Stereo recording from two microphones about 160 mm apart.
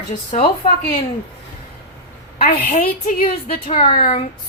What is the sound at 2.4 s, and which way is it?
A woman's voice, 55° left (ahead or behind).